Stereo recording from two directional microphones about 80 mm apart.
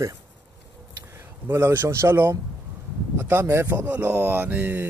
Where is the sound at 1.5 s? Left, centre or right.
Right.